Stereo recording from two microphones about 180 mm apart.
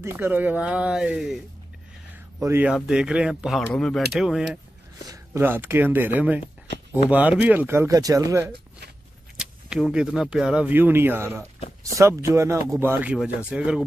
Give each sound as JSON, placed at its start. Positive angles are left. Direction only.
{"t": 0.0, "sound": "speech", "side_deg": -10}
{"t": 2.4, "sound": "speech", "side_deg": -10}
{"t": 5.0, "sound": "speech", "side_deg": -20}
{"t": 9.4, "sound": "speech", "side_deg": -5}